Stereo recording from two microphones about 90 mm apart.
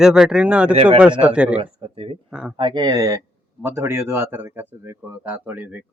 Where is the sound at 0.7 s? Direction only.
90° right.